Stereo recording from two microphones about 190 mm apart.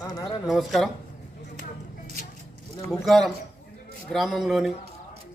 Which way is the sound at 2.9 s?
Centre (ahead or behind).